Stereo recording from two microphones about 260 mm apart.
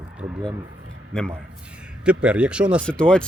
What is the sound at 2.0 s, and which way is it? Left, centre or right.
Speech, centre.